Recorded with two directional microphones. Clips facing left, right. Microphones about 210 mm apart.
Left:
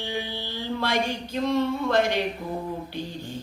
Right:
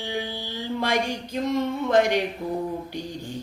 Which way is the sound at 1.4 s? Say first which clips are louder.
Left 1 dB; 15° right (ahead or behind).